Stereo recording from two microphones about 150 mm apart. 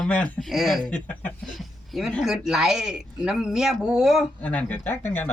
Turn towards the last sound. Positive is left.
turn(degrees=15)  # may be behind; listen again after turning